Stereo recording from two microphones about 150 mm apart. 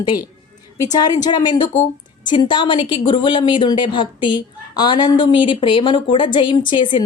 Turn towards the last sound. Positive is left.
turn(degrees=35)  # may be behind; listen again after turning